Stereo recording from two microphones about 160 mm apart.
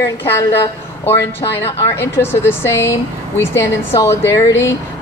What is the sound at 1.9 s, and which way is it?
Speech, 15° left (ahead or behind).